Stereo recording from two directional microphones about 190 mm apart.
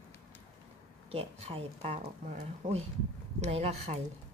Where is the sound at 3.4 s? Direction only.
35° right (ahead or behind).